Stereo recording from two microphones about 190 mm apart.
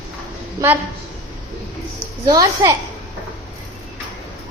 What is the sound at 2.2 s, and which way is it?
Speech, 20° right (ahead or behind).